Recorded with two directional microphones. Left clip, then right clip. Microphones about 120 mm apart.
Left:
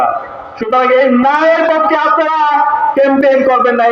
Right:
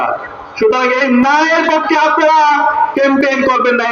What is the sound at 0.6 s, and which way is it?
A man's voice, 30° left (ahead or behind).